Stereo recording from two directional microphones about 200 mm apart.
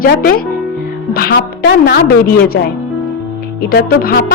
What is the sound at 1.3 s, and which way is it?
Speech, 65° left (ahead or behind).